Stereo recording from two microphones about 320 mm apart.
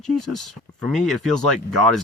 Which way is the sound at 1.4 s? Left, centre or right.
Right.